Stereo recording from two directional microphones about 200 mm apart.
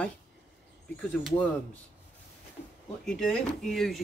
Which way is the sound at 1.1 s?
5° left (ahead or behind).